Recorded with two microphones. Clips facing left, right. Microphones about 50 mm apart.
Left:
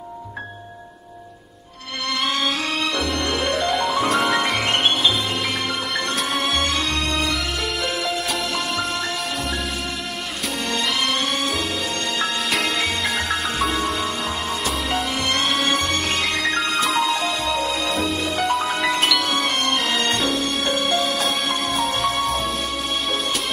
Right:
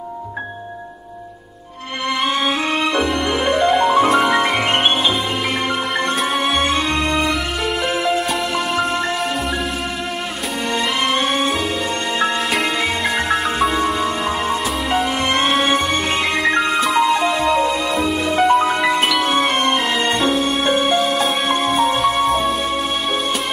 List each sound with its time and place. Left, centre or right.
2.2 s music: centre
4.1 s music: centre
6.1 s music: centre
10.7 s music: centre
12.5 s music: centre
15.5 s music: centre